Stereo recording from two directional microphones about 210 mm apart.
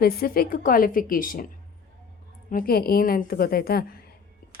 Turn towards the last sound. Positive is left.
turn(degrees=45)  # may be behind; listen again after turning